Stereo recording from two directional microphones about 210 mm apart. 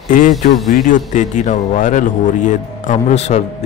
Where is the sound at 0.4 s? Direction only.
40° left (ahead or behind).